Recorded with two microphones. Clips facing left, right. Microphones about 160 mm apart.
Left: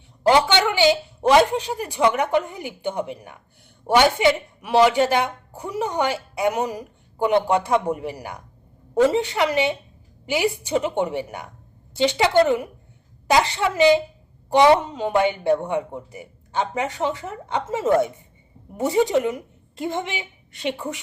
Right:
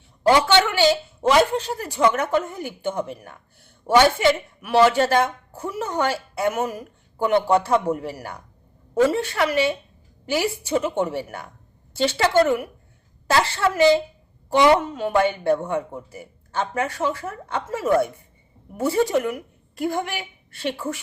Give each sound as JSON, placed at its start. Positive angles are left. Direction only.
{"t": 0.2, "sound": "a woman's voice", "side_deg": 15}